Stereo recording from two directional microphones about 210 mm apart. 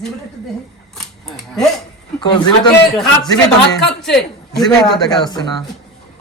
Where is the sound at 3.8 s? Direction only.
Centre (ahead or behind).